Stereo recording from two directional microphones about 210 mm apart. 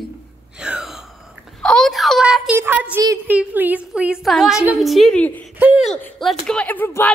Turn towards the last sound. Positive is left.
turn(degrees=10)  # may be behind; listen again after turning